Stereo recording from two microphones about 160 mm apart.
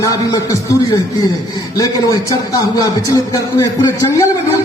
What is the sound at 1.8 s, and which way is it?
A man's voice, 20° left (ahead or behind).